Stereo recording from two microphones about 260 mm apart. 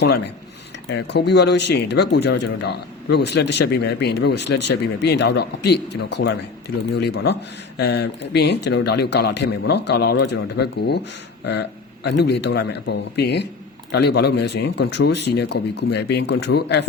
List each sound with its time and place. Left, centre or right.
0.9 s a man's voice: left